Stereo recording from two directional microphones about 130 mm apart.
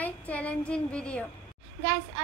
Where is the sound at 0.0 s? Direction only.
10° left (ahead or behind).